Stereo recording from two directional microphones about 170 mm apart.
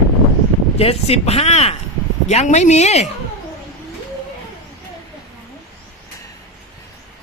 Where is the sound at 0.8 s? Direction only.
35° left (ahead or behind).